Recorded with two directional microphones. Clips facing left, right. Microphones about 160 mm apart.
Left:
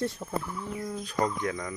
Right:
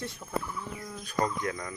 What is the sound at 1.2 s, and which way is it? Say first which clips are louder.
Speech: left 1 dB; 20° left (ahead or behind).